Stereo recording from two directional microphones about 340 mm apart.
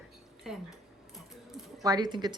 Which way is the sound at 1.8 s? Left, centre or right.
Centre.